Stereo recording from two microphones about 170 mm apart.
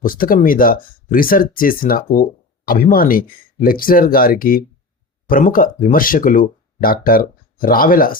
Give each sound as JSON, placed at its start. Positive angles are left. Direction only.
{"t": 0.0, "sound": "speech", "side_deg": 55}